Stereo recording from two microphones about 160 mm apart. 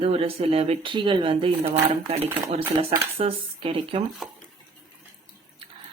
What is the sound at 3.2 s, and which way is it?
Speech, 35° right (ahead or behind).